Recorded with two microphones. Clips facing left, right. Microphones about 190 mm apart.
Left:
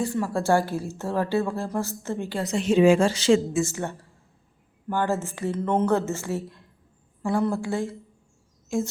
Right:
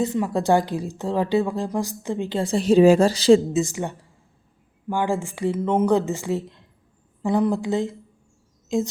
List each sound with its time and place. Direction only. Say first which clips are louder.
0.0 s a woman's voice: right 3 dB; 20° right (ahead or behind); by 3.4 s 35° right (ahead or behind)
3.5 s a woman's voice: right 2 dB; 15° right (ahead or behind)